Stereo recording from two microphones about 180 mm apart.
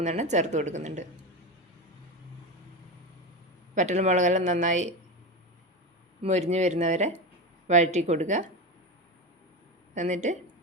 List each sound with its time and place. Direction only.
0.0 s speech: 40° right (ahead or behind)
3.8 s speech: 40° right (ahead or behind)
6.2 s speech: 40° right (ahead or behind)
9.9 s speech: 40° right (ahead or behind)